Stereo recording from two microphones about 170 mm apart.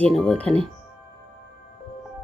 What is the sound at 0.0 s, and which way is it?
Speech, 5° left (ahead or behind).